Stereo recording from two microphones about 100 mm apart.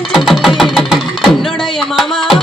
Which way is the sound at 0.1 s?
Centre (ahead or behind).